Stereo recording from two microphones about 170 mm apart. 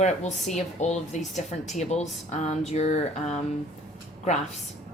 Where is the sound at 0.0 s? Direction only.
45° left (ahead or behind).